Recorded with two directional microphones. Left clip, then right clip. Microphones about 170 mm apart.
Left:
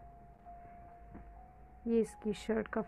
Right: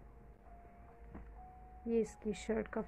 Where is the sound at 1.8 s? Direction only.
25° left (ahead or behind).